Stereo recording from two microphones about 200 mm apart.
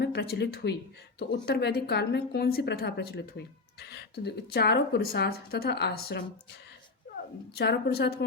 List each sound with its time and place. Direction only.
0.0 s a woman's voice: 55° left (ahead or behind)
7.5 s a woman's voice: 55° left (ahead or behind)